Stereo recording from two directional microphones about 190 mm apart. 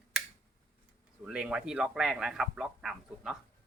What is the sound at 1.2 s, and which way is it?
Speech, 5° right (ahead or behind).